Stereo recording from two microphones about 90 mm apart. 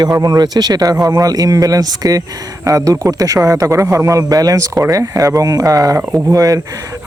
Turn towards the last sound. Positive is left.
turn(degrees=-40)  # may be behind; listen again after turning